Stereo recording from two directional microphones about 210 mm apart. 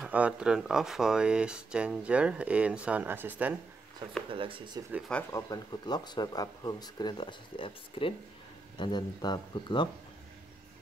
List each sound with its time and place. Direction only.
0.0 s speech: 5° right (ahead or behind)
4.3 s speech: 25° right (ahead or behind)
4.9 s speech: centre (ahead or behind)
5.3 s speech: 20° left (ahead or behind)